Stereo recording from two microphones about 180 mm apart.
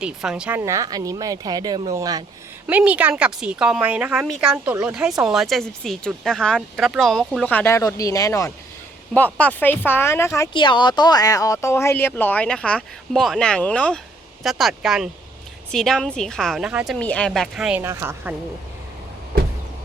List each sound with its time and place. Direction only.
0.0 s speech: 5° right (ahead or behind)
0.6 s speech: 20° right (ahead or behind)
2.6 s speech: 10° right (ahead or behind)